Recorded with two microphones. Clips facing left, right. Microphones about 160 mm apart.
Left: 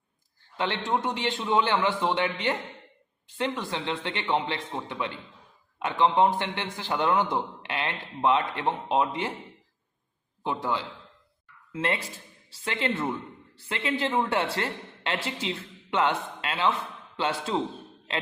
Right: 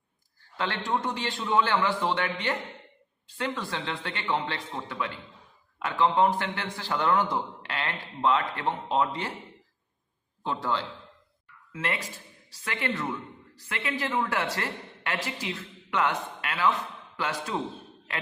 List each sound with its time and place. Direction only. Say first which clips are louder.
0.5 s a man's voice: left 2 dB; 20° left (ahead or behind)
10.4 s a man's voice: left 1 dB; 20° left (ahead or behind)
11.7 s a man's voice: left 3 dB; 25° left (ahead or behind)